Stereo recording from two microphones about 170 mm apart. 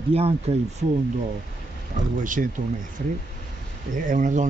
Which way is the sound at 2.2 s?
50° right (ahead or behind).